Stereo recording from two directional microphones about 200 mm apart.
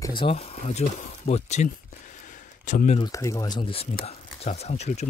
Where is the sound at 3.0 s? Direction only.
15° left (ahead or behind).